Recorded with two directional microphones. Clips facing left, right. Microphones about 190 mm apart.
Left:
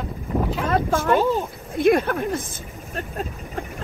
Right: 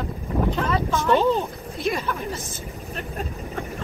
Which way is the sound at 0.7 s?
50° left (ahead or behind).